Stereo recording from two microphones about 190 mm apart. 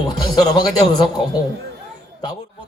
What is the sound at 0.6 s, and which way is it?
Speech, 20° left (ahead or behind).